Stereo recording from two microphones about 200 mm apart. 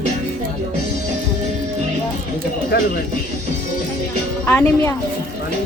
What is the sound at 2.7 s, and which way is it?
Speech, 50° left (ahead or behind).